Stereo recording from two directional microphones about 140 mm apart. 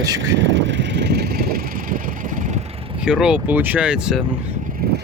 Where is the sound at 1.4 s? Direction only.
90° right.